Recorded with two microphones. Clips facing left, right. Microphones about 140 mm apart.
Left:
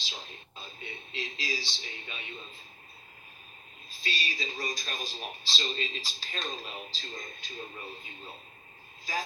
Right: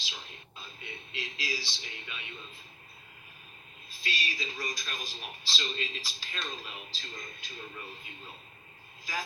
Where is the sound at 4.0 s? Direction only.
25° left (ahead or behind).